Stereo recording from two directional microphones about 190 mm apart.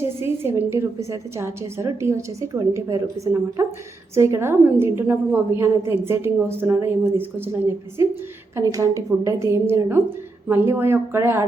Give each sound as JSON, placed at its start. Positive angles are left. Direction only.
{"t": 0.0, "sound": "a woman's voice", "side_deg": -15}